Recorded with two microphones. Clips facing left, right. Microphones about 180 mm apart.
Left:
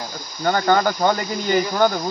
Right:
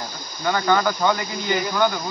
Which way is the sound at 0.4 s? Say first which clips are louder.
Left 2 dB; 40° left (ahead or behind).